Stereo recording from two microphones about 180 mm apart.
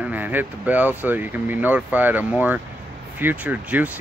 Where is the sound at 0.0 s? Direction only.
10° right (ahead or behind).